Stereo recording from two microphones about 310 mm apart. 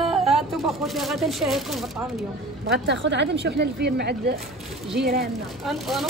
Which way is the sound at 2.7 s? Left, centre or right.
Right.